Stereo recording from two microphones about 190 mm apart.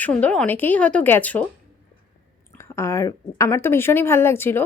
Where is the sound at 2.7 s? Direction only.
15° left (ahead or behind).